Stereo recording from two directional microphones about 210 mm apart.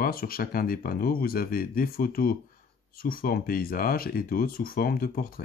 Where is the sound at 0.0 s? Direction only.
45° left (ahead or behind).